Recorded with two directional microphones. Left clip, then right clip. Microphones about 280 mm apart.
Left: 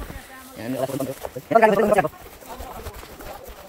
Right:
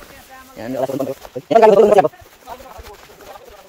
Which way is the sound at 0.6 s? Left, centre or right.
Centre.